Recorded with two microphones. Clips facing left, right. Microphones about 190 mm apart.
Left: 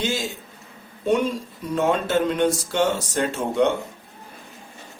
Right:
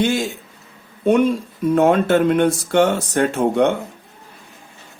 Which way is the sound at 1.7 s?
55° right (ahead or behind).